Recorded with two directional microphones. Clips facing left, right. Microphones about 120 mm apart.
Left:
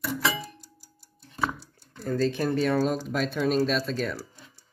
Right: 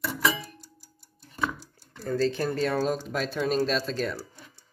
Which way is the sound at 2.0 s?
Centre (ahead or behind).